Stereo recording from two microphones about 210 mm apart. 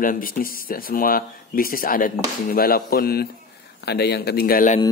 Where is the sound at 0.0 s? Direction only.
40° left (ahead or behind).